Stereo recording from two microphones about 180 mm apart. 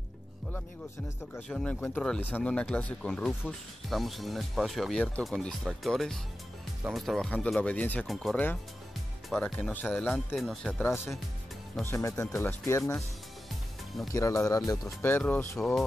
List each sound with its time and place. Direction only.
1.3 s speech: 5° left (ahead or behind)
11.8 s speech: 15° left (ahead or behind)
14.1 s speech: 20° left (ahead or behind)